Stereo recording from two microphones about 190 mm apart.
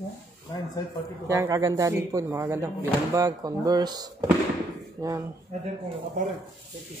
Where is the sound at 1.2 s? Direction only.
15° right (ahead or behind).